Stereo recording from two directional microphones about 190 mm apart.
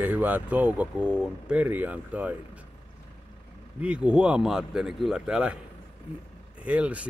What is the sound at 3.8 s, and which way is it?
Speech, 5° right (ahead or behind).